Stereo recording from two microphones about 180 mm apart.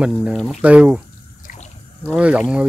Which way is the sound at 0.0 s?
5° right (ahead or behind).